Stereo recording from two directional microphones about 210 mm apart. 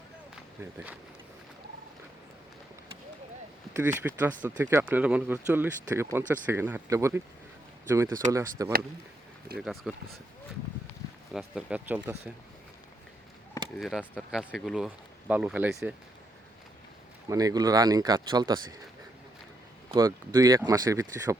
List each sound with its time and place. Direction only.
0.6 s speech: 10° right (ahead or behind)
3.8 s speech: 10° right (ahead or behind)
9.6 s speech: centre (ahead or behind)
11.3 s speech: 5° right (ahead or behind)
13.7 s speech: centre (ahead or behind)
17.2 s speech: 15° right (ahead or behind)
19.9 s speech: 15° right (ahead or behind)